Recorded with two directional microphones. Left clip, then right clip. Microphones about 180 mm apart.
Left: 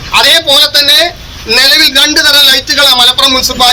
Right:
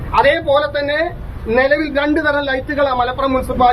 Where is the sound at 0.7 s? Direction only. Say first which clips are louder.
Left 11 dB; 15° left (ahead or behind).